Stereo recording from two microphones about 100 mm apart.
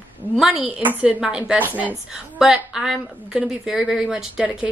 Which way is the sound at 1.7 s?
20° right (ahead or behind).